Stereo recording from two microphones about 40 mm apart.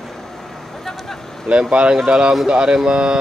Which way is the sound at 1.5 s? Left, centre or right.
Right.